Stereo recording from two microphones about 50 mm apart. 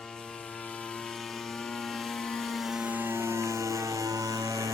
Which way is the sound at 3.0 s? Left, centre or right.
Right.